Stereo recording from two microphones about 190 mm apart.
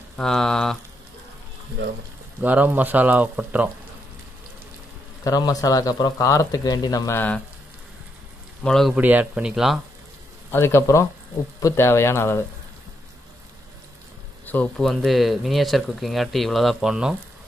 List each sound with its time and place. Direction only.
0.2 s speech: 5° left (ahead or behind)
2.4 s speech: 10° right (ahead or behind)
5.2 s speech: 20° left (ahead or behind)
8.6 s speech: centre (ahead or behind)
10.5 s speech: 15° left (ahead or behind)
14.4 s speech: 10° left (ahead or behind)